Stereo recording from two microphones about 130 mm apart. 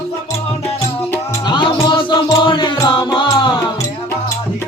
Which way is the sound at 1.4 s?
35° left (ahead or behind).